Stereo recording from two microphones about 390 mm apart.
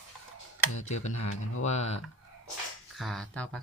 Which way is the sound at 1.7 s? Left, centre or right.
Centre.